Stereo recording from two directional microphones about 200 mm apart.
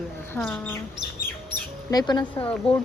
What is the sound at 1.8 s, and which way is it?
Speech, 20° left (ahead or behind).